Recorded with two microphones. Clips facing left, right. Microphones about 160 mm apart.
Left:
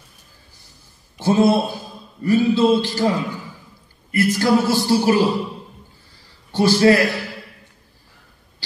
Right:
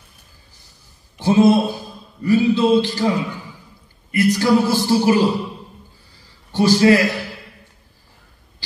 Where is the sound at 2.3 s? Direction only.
20° right (ahead or behind).